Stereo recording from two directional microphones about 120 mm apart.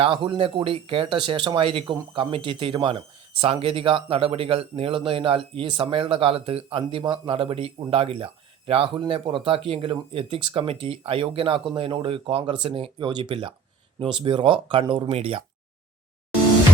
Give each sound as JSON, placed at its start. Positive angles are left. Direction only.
{"t": 0.0, "sound": "speech", "side_deg": -45}
{"t": 7.0, "sound": "speech", "side_deg": -35}
{"t": 7.3, "sound": "speech", "side_deg": -50}